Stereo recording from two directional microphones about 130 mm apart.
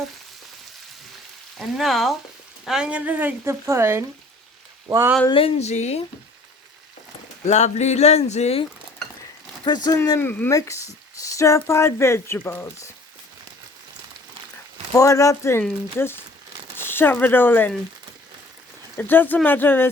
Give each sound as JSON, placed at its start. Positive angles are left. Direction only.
{"t": 1.5, "sound": "frying", "side_deg": 0}
{"t": 2.6, "sound": "speech", "side_deg": -5}
{"t": 5.3, "sound": "speech", "side_deg": 45}
{"t": 7.4, "sound": "speech", "side_deg": 60}
{"t": 9.6, "sound": "speech", "side_deg": 30}
{"t": 10.0, "sound": "speech", "side_deg": 20}
{"t": 14.9, "sound": "speech", "side_deg": 25}
{"t": 16.7, "sound": "speech", "side_deg": 15}
{"t": 18.9, "sound": "speech", "side_deg": 15}